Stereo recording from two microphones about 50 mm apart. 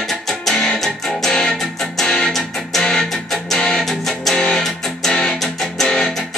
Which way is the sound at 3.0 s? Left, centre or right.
Centre.